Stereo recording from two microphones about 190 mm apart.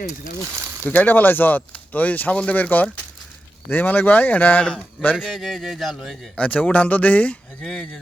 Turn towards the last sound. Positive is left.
turn(degrees=5)  # may be behind; listen again after turning